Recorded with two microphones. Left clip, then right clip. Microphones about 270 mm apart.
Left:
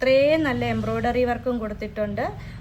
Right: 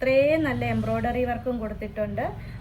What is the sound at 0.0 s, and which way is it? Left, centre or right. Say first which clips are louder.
A woman's voice: left 2 dB; centre.